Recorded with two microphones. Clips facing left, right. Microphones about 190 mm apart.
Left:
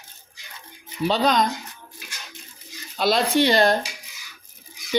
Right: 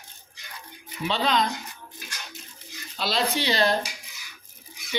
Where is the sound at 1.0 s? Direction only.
40° left (ahead or behind).